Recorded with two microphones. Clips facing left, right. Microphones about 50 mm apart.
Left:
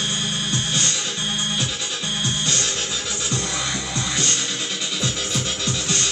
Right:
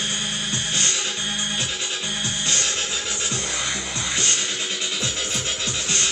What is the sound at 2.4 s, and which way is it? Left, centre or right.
Music, centre.